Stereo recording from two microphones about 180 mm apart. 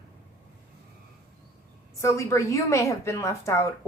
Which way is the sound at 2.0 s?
15° left (ahead or behind).